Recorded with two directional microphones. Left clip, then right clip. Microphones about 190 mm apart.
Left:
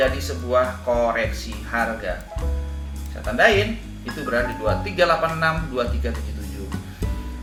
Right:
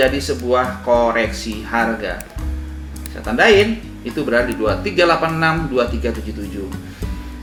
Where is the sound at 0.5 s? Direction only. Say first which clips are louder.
Right 4 dB; 45° right (ahead or behind).